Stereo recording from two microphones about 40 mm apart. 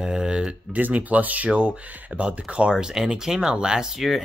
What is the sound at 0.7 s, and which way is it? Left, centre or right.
Speech, right.